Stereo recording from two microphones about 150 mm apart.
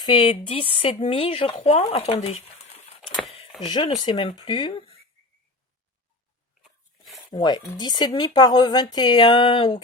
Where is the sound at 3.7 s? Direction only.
30° left (ahead or behind).